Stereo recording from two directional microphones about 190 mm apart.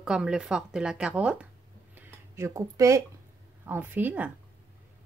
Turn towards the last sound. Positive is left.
turn(degrees=-10)  # may be behind; listen again after turning